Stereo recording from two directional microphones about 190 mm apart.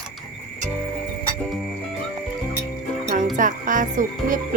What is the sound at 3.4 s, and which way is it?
Speech, 45° right (ahead or behind).